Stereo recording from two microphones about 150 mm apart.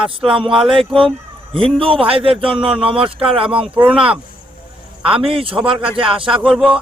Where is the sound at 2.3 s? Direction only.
5° right (ahead or behind).